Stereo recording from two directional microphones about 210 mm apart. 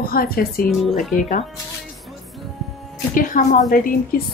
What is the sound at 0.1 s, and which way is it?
Speech, 45° left (ahead or behind).